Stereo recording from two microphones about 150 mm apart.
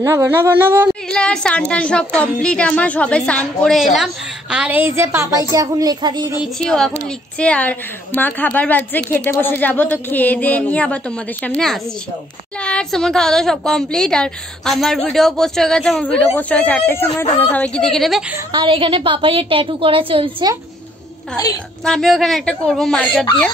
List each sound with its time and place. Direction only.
0.0 s a woman's voice: 20° right (ahead or behind)
0.8 s a woman's voice: 5° left (ahead or behind); by 6.3 s 30° right (ahead or behind)
6.6 s a woman's voice: 5° left (ahead or behind)
18.5 s a woman's voice: 35° right (ahead or behind)
21.8 s a woman's voice: centre (ahead or behind)